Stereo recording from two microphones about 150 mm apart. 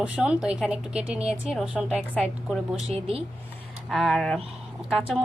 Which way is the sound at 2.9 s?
40° right (ahead or behind).